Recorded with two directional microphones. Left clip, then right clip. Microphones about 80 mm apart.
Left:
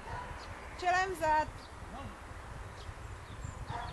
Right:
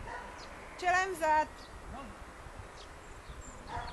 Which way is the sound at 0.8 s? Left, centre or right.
Right.